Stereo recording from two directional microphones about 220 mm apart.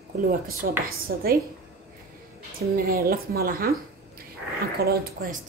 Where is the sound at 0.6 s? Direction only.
50° right (ahead or behind).